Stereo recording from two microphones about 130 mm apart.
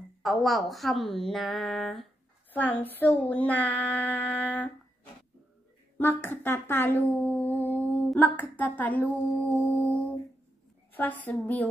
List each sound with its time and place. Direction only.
0.2 s a woman's voice: centre (ahead or behind)
2.5 s speech: 10° left (ahead or behind)
5.9 s speech: 15° left (ahead or behind)